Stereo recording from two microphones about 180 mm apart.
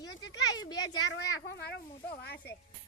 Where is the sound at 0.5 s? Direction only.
20° left (ahead or behind).